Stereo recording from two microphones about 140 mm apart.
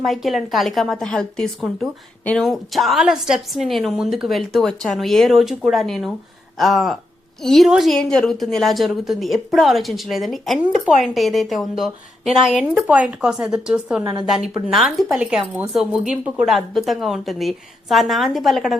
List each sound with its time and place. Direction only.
0.0 s a woman's voice: centre (ahead or behind)
14.0 s a woman's voice: 30° right (ahead or behind)
14.7 s a woman's voice: centre (ahead or behind)